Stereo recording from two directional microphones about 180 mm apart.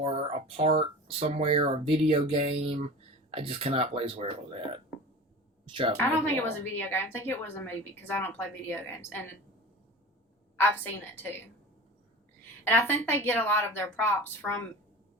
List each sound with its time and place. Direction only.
0.0 s a woman's voice: 30° right (ahead or behind)
6.0 s a woman's voice: 10° left (ahead or behind)
10.6 s a woman's voice: 10° left (ahead or behind)
12.6 s a woman's voice: 10° left (ahead or behind)